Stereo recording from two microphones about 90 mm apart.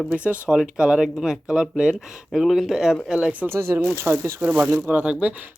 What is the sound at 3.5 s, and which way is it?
Speech, 30° right (ahead or behind).